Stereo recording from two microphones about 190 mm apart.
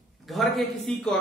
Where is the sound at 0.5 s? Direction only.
Centre (ahead or behind).